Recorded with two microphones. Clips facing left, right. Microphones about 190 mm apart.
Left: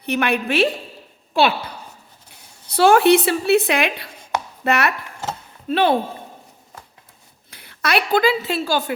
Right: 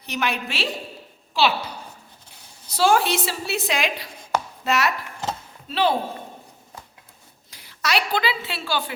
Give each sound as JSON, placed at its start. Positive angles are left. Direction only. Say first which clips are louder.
{"t": 0.0, "sound": "a woman's voice", "louder": "left 6 dB", "side_deg": 60}
{"t": 7.5, "sound": "a woman's voice", "louder": "left 4 dB", "side_deg": 55}